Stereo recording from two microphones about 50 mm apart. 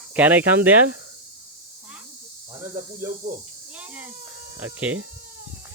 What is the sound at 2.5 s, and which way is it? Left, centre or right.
Speech, right.